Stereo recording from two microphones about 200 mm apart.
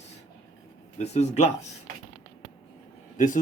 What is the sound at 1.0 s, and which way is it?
Speech, 35° left (ahead or behind).